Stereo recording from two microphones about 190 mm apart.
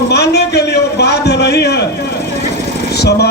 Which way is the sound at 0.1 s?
60° left (ahead or behind).